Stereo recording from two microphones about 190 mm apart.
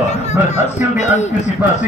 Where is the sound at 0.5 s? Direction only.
40° left (ahead or behind).